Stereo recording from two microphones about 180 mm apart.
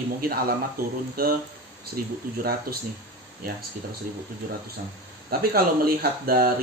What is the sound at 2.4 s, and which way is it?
Speech, 55° right (ahead or behind).